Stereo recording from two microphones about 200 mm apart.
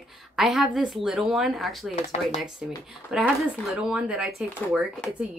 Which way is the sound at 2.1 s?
30° left (ahead or behind).